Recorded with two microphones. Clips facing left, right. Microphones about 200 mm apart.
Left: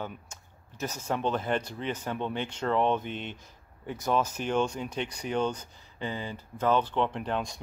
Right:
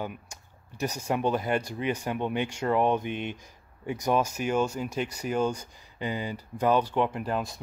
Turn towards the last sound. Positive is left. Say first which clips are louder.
# right 1 dB
turn(degrees=-5)  # may be behind; listen again after turning